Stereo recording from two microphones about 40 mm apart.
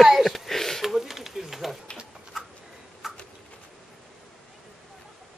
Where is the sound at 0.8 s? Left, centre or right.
Centre.